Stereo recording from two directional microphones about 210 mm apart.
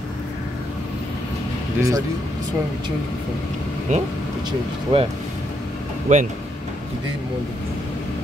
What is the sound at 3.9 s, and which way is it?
Speech, 35° right (ahead or behind).